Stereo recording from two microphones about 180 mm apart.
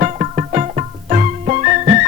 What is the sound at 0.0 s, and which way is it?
Music, 40° right (ahead or behind).